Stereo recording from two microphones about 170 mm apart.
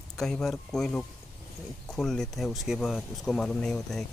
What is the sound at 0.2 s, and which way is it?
Speech, 5° left (ahead or behind).